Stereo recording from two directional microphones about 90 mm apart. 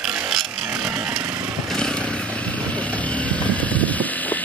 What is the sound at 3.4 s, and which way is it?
Vehicle, 15° left (ahead or behind).